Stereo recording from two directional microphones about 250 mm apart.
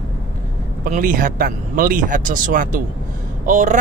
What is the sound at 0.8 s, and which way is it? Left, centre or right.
Speech, right.